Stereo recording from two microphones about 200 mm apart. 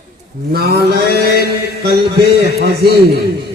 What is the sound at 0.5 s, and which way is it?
Mantra, 50° right (ahead or behind).